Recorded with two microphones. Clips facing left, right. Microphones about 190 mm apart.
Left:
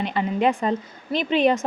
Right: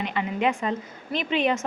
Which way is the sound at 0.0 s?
35° left (ahead or behind).